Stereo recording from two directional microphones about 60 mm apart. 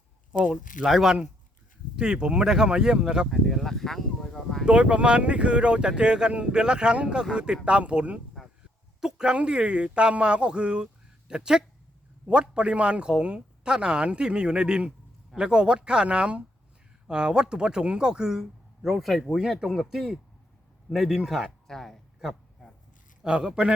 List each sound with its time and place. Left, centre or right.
0.9 s a man's voice: centre
2.0 s speech: centre
3.2 s speech: centre
4.6 s speech: centre
9.0 s a man's voice: centre
21.7 s a sound: centre
23.2 s speech: centre